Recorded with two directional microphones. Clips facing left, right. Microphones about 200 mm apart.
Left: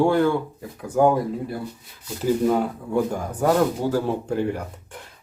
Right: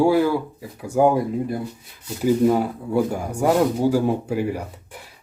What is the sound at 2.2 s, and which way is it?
Speech, 10° right (ahead or behind).